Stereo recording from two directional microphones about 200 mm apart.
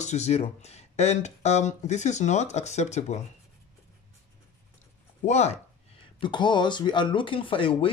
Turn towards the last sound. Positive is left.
turn(degrees=25)  # may be behind; listen again after turning